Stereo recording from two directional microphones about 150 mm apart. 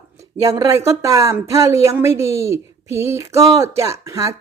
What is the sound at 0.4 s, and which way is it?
A woman's voice, 20° right (ahead or behind).